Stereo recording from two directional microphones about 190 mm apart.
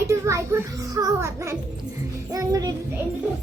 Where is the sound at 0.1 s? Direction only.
15° right (ahead or behind).